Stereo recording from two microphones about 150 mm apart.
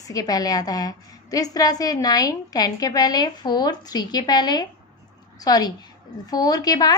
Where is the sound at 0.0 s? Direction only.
25° left (ahead or behind).